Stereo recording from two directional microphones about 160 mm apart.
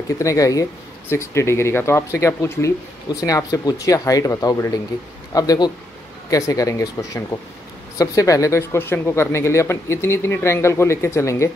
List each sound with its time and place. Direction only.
0.2 s speech: 20° left (ahead or behind)